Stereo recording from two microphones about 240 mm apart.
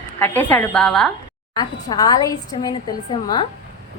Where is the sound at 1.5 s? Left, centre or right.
Centre.